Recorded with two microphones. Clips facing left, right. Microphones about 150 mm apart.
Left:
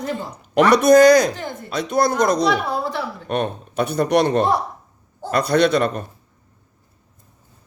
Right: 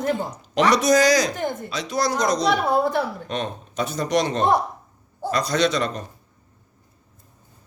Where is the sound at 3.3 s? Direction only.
60° left (ahead or behind).